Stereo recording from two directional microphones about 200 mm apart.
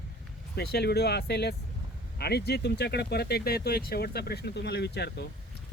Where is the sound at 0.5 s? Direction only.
55° left (ahead or behind).